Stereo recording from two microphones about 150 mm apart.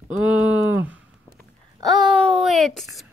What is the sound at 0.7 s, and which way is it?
Speech, 10° right (ahead or behind).